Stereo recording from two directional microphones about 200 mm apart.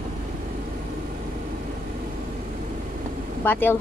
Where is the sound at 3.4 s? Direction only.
10° left (ahead or behind).